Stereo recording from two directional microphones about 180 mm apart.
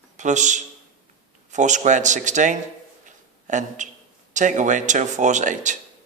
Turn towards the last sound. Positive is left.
turn(degrees=-45)  # may be behind; listen again after turning